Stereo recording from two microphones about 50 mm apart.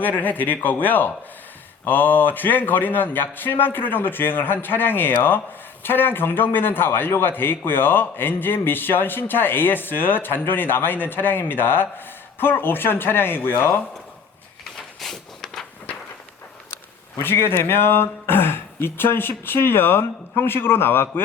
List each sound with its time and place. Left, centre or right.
0.0 s a man's voice: left
14.6 s a sound: centre
17.3 s a man's voice: left